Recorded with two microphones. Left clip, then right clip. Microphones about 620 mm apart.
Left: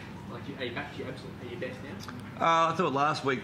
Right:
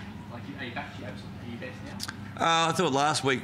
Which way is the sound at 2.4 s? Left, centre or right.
Right.